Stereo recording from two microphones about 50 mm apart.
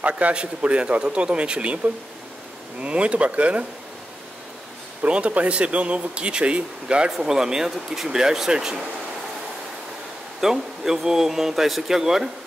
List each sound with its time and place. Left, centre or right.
0.2 s speech: right
2.8 s speech: right
5.0 s speech: right
10.4 s speech: centre